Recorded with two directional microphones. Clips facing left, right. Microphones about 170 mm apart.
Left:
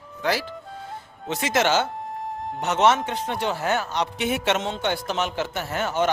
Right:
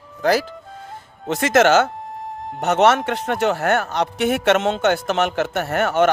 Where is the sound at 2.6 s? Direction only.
60° right (ahead or behind).